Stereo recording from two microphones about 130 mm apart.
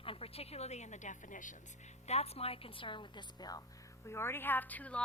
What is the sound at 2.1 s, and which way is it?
A woman's voice, 55° left (ahead or behind).